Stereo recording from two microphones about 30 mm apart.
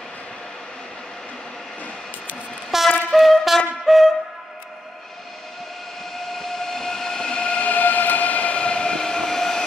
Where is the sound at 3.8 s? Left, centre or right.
Centre.